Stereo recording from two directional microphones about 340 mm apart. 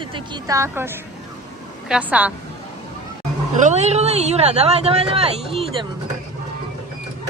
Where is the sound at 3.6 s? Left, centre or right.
Centre.